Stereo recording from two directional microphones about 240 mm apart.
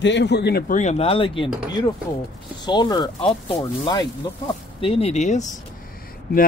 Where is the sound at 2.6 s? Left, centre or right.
Centre.